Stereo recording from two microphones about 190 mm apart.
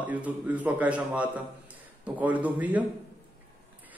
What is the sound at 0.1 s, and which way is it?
Speech, 10° right (ahead or behind).